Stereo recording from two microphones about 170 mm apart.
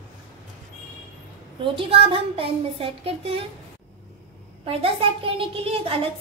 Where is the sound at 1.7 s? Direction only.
30° right (ahead or behind).